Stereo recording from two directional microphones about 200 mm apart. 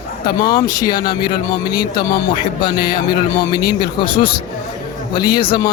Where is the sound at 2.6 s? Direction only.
20° left (ahead or behind).